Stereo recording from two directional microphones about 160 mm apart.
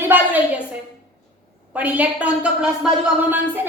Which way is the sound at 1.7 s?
10° right (ahead or behind).